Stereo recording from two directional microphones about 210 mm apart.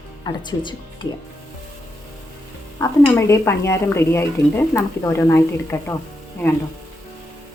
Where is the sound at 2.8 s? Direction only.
15° left (ahead or behind).